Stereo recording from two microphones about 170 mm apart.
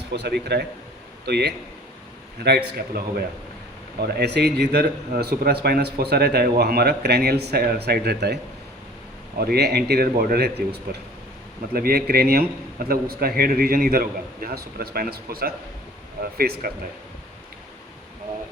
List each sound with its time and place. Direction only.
0.1 s a man's voice: 80° right
2.7 s a man's voice: 65° right (ahead or behind)
9.4 s a man's voice: 70° right (ahead or behind)